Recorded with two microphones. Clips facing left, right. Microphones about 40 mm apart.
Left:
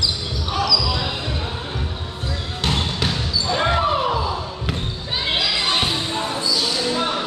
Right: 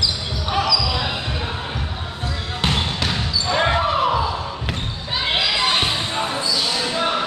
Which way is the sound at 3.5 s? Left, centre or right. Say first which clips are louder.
Right 1 dB; centre.